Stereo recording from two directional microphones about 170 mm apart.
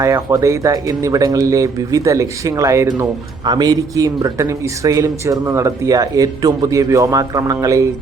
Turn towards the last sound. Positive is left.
turn(degrees=-20)  # may be behind; listen again after turning